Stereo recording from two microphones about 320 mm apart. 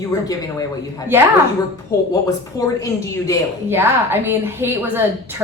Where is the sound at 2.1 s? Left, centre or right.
Centre.